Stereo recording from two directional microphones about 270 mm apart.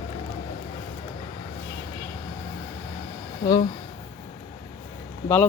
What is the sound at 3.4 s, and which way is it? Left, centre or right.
Speech, centre.